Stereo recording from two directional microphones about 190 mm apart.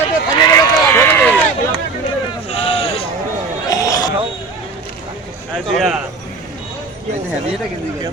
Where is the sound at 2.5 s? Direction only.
30° left (ahead or behind).